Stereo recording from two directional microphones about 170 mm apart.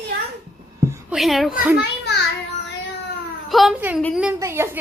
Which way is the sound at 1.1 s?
Centre (ahead or behind).